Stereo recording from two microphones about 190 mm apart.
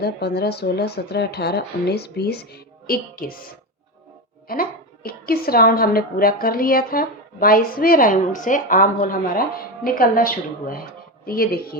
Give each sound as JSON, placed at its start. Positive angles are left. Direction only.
{"t": 0.0, "sound": "speech", "side_deg": 55}
{"t": 4.4, "sound": "a woman's voice", "side_deg": 50}